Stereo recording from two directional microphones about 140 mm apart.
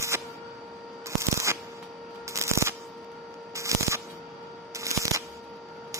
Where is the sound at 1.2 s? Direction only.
20° right (ahead or behind).